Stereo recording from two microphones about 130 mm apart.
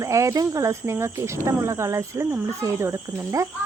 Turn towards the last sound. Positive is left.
turn(degrees=-25)  # may be behind; listen again after turning